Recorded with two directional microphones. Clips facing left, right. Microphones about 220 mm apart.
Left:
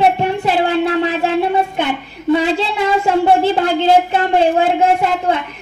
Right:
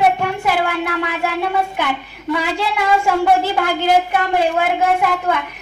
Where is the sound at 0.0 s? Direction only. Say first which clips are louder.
Left 2 dB; 25° left (ahead or behind).